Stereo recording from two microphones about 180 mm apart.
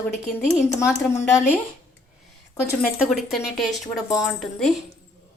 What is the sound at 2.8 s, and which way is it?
Speech, centre (ahead or behind).